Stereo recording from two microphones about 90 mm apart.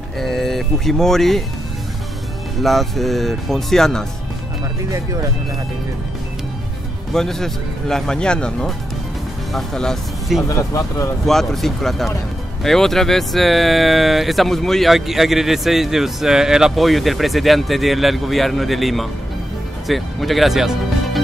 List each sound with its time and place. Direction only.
0.2 s speech: 5° left (ahead or behind)
2.6 s speech: centre (ahead or behind)
7.2 s speech: 5° left (ahead or behind)
10.5 s speech: 40° left (ahead or behind)
11.2 s speech: 5° left (ahead or behind)